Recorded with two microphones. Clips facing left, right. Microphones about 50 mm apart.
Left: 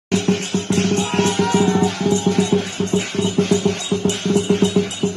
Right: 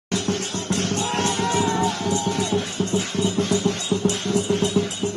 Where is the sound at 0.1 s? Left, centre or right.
Left.